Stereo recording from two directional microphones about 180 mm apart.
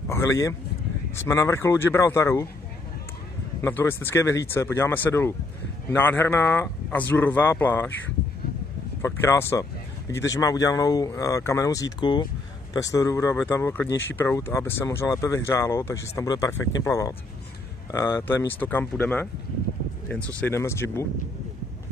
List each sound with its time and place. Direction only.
0.1 s speech: 15° left (ahead or behind)
3.6 s speech: 15° left (ahead or behind)
9.0 s speech: 15° left (ahead or behind)
20.3 s speech: 15° left (ahead or behind)